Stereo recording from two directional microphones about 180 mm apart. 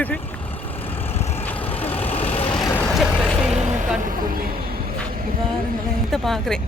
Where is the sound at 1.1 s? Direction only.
35° left (ahead or behind).